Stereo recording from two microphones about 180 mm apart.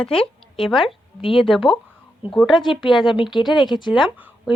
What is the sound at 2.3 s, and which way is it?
A woman's voice, centre (ahead or behind).